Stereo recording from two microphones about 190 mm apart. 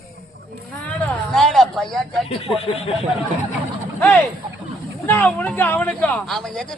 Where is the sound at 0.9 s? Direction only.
5° left (ahead or behind).